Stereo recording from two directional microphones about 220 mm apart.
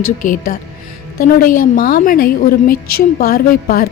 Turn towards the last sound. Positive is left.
turn(degrees=45)  # may be behind; listen again after turning